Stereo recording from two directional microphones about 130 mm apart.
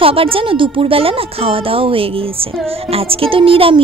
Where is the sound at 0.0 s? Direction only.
45° right (ahead or behind).